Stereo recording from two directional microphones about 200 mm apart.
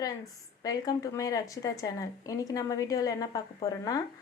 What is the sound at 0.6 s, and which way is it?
A woman's voice, 20° left (ahead or behind).